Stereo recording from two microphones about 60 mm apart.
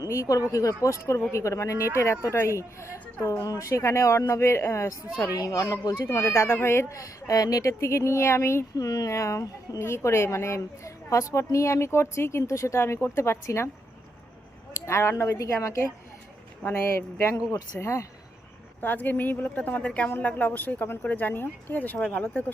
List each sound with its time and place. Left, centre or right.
0.1 s speech: left
0.5 s speech: left
3.4 s a woman's voice: left
3.7 s speech: left
5.9 s speech: left
8.7 s speech: left
14.7 s a sound: left
15.4 s speech: left
17.2 s speech: left
18.8 s a woman's voice: left